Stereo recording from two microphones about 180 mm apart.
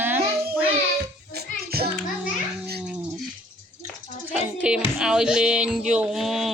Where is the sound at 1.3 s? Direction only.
60° right (ahead or behind).